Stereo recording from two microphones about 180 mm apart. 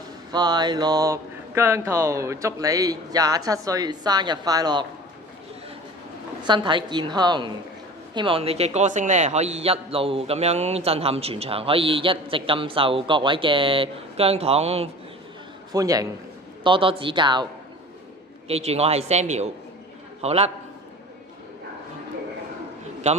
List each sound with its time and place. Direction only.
0.3 s speech: 25° right (ahead or behind)
6.4 s a man's voice: 25° right (ahead or behind)
15.7 s a man's voice: 20° right (ahead or behind); by 20.5 s 35° right (ahead or behind)